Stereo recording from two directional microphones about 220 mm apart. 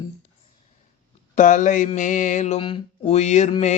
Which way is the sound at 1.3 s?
35° left (ahead or behind).